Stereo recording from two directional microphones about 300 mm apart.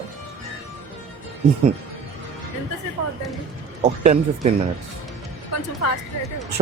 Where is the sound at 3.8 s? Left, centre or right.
Right.